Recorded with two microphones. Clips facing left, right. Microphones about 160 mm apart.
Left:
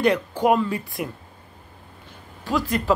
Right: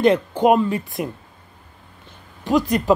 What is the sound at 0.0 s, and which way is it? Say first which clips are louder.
A woman's voice: right 4 dB; 20° right (ahead or behind).